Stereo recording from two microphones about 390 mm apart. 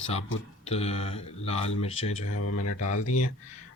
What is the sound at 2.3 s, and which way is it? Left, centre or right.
Speech, left.